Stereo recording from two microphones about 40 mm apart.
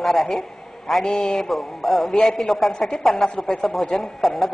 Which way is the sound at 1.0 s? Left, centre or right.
Left.